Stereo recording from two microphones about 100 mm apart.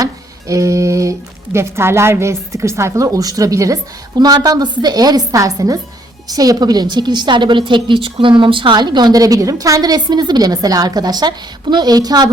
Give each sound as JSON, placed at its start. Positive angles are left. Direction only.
{"t": 0.0, "sound": "music", "side_deg": -35}
{"t": 1.5, "sound": "a woman's voice", "side_deg": -25}